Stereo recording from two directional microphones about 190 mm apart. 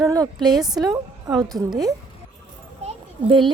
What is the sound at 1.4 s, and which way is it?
Speech, 20° right (ahead or behind).